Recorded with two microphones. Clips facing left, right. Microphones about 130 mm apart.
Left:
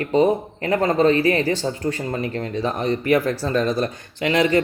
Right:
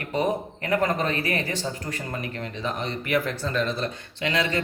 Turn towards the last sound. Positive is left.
turn(degrees=40)  # may be behind; listen again after turning